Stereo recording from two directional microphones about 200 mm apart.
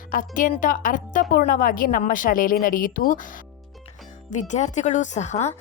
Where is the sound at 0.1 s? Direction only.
40° left (ahead or behind).